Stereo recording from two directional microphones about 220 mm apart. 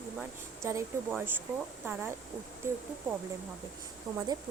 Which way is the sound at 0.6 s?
10° right (ahead or behind).